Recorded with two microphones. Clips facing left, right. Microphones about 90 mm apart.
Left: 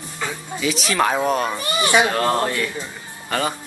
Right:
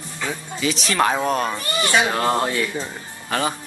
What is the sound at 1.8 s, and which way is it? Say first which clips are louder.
Speech: left 2 dB; 15° left (ahead or behind).